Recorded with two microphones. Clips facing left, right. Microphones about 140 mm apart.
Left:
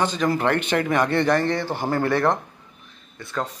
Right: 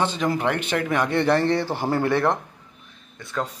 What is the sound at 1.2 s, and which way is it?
Speech, 30° right (ahead or behind).